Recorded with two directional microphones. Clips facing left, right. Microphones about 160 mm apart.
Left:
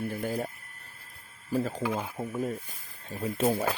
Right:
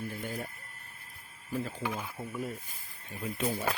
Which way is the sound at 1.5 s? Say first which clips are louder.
Left 6 dB; 40° left (ahead or behind).